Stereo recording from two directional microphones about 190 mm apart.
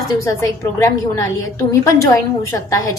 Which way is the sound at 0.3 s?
15° left (ahead or behind).